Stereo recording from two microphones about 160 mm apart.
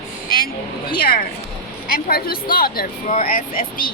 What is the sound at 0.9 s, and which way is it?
A woman's voice, 65° left (ahead or behind).